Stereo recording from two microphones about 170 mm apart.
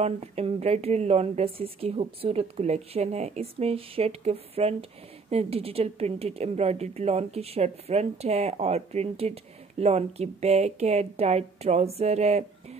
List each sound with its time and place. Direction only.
0.0 s a woman's voice: 40° right (ahead or behind)